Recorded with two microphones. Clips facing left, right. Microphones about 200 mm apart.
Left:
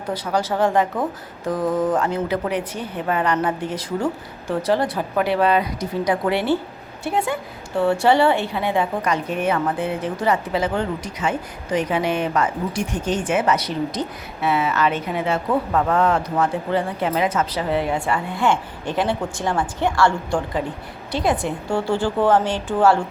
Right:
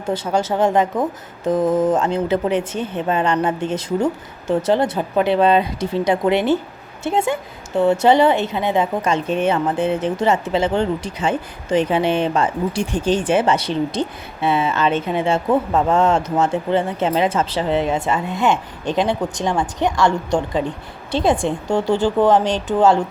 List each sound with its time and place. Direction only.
0.1 s a woman's voice: 25° right (ahead or behind)